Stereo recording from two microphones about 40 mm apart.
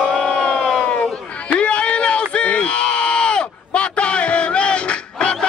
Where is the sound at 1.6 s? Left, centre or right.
Left.